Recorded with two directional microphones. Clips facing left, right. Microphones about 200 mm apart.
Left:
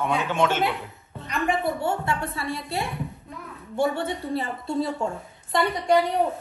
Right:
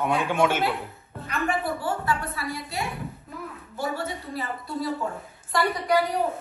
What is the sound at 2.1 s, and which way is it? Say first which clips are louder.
Speech: even; centre (ahead or behind).